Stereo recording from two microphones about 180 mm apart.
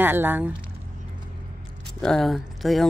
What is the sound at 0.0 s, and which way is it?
Speech, 10° right (ahead or behind).